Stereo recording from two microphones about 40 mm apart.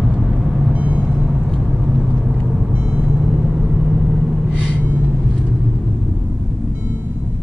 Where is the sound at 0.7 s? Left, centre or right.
Right.